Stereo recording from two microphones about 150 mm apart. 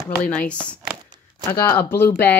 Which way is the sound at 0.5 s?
10° left (ahead or behind).